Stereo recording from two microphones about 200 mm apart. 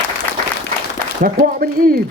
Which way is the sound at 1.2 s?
45° right (ahead or behind).